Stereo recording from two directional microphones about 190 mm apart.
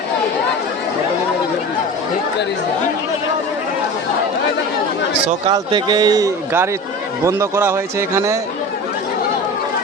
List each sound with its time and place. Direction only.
5.5 s a man's voice: 20° right (ahead or behind)